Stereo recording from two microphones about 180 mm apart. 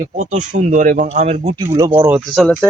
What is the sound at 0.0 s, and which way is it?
Speech, 45° right (ahead or behind).